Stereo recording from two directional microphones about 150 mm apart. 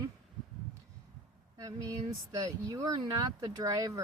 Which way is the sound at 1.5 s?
20° right (ahead or behind).